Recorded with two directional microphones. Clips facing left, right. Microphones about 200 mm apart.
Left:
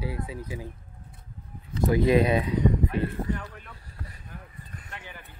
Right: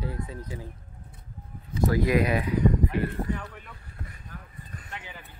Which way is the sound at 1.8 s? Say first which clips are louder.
Left 2 dB; 25° left (ahead or behind).